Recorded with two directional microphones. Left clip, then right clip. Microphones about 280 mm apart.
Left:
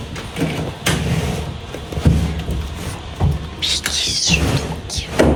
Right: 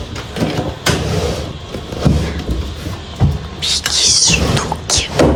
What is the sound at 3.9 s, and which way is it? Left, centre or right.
Mechanisms, right.